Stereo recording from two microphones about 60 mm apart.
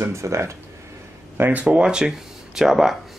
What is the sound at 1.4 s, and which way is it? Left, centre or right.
Speech, right.